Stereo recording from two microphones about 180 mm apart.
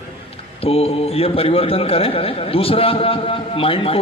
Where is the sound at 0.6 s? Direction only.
35° left (ahead or behind).